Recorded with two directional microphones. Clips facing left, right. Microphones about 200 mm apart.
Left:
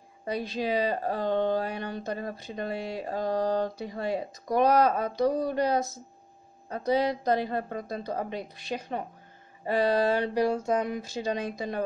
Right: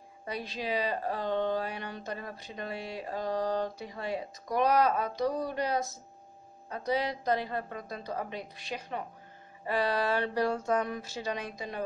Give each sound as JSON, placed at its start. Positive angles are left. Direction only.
{"t": 0.2, "sound": "speech", "side_deg": 40}
{"t": 7.1, "sound": "speech", "side_deg": 30}
{"t": 10.1, "sound": "speech", "side_deg": 15}
{"t": 11.5, "sound": "speech", "side_deg": 40}